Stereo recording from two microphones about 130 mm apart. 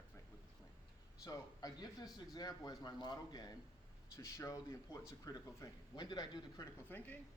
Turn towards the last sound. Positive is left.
turn(degrees=15)  # may be behind; listen again after turning